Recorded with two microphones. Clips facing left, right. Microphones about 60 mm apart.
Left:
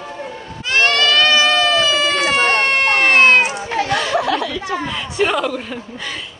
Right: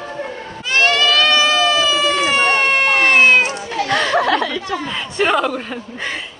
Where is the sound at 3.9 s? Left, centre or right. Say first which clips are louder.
Right 4 dB; right.